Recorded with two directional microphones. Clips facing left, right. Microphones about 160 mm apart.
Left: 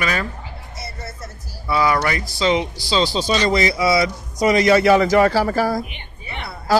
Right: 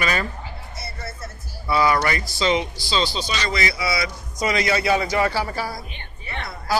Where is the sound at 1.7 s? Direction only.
5° left (ahead or behind).